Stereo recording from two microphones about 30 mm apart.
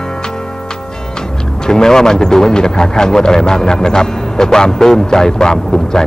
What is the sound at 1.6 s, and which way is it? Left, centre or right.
A man's voice, centre.